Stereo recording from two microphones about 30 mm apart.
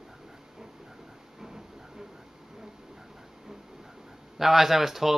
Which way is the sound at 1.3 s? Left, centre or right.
Centre.